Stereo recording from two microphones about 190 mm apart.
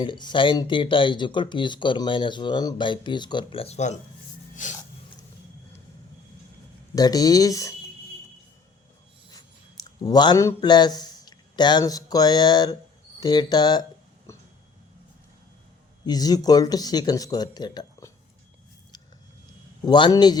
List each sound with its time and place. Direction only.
0.0 s speech: 25° left (ahead or behind)
4.6 s a sound: 45° left (ahead or behind)
6.9 s speech: 20° left (ahead or behind)
9.8 s a man's voice: 20° left (ahead or behind)
16.0 s speech: 20° left (ahead or behind)
19.8 s speech: 25° left (ahead or behind)